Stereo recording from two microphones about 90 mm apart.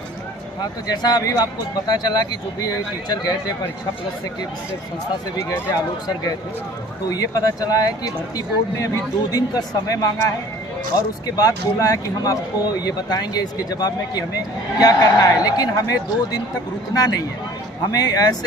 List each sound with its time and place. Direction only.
0.6 s speech: 45° left (ahead or behind)
7.1 s speech: 40° left (ahead or behind)